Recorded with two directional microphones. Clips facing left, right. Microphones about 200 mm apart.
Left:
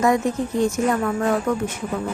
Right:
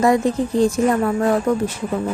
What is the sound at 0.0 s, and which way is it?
Speech, 35° right (ahead or behind).